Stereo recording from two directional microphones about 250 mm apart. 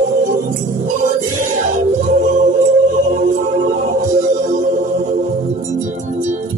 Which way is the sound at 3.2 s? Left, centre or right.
Right.